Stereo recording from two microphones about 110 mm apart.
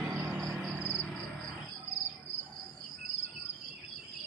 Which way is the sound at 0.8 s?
15° left (ahead or behind).